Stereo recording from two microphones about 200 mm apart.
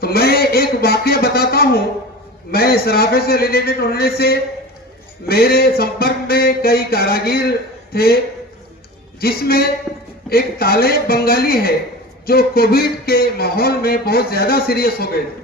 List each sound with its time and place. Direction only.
0.0 s speech: 50° left (ahead or behind)
9.2 s speech: 50° left (ahead or behind)
9.9 s a sound: 15° right (ahead or behind)
10.2 s speech: 50° left (ahead or behind)